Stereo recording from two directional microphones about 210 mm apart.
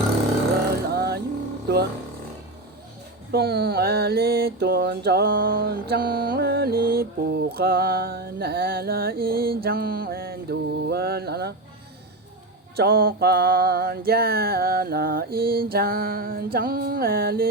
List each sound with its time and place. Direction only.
0.9 s vehicle: 50° right (ahead or behind)
1.6 s a sound: 50° right (ahead or behind)
3.3 s mantra: 50° right (ahead or behind)
12.7 s mantra: 50° right (ahead or behind)